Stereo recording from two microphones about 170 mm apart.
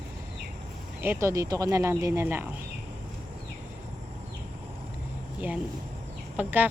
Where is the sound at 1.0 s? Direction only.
15° right (ahead or behind).